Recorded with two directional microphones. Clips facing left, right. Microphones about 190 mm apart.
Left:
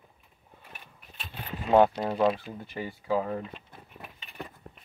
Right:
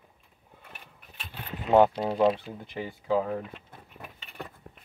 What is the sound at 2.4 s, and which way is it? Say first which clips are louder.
Speech: even; 15° right (ahead or behind).